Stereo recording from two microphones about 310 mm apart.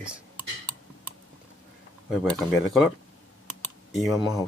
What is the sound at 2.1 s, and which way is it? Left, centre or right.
Speech, centre.